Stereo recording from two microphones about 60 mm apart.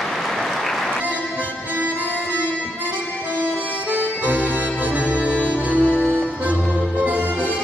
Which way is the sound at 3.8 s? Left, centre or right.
Right.